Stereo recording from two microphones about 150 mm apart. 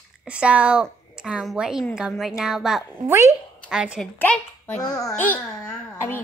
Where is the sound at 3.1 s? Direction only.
20° right (ahead or behind).